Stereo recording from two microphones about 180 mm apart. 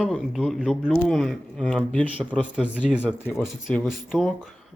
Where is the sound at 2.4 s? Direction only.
5° right (ahead or behind).